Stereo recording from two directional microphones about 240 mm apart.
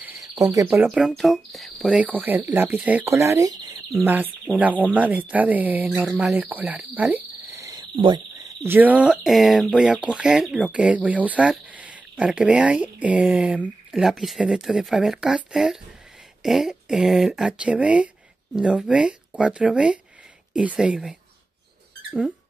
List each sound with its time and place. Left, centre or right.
0.0 s bird: centre
0.8 s speech: centre
8.6 s speech: centre